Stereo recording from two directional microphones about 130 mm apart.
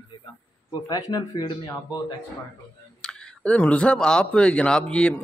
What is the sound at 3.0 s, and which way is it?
Speech, 5° left (ahead or behind).